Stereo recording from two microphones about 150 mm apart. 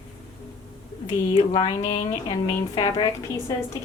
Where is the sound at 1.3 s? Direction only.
30° left (ahead or behind).